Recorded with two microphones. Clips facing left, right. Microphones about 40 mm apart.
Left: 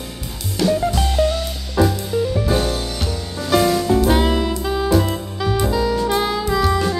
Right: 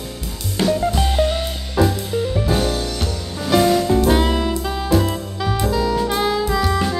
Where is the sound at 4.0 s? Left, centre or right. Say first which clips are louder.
Even; centre.